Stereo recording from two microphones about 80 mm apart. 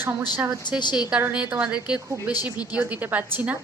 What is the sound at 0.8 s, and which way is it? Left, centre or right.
Speech, left.